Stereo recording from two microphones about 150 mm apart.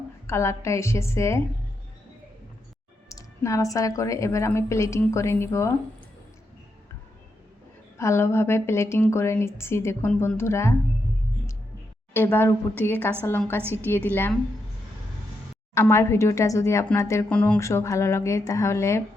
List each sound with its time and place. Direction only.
0.3 s a woman's voice: 20° left (ahead or behind)
3.1 s a woman's voice: 20° left (ahead or behind)
7.9 s a woman's voice: 20° left (ahead or behind)
12.1 s a woman's voice: 15° left (ahead or behind)
15.7 s a woman's voice: 20° left (ahead or behind)